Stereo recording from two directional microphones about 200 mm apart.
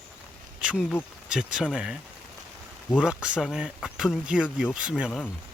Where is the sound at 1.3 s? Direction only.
5° right (ahead or behind).